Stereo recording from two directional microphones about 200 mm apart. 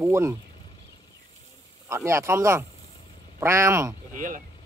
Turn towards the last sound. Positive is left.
turn(degrees=-40)  # may be behind; listen again after turning